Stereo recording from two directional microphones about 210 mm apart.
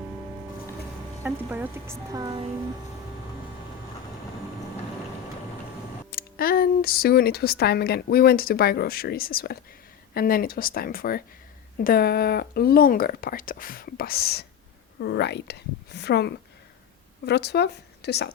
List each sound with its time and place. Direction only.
1.2 s speech: 10° right (ahead or behind)
6.1 s speech: 45° left (ahead or behind)